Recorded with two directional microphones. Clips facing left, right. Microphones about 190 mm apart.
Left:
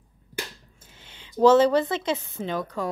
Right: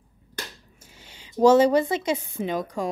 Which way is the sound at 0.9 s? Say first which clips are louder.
Right 1 dB; 40° right (ahead or behind).